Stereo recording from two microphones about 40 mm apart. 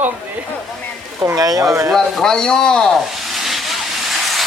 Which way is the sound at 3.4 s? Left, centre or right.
Centre.